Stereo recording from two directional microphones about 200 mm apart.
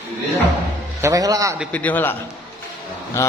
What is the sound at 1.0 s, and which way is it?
Speech, 15° right (ahead or behind).